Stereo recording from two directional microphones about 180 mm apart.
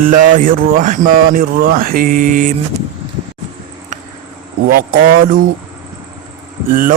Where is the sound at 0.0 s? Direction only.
45° right (ahead or behind).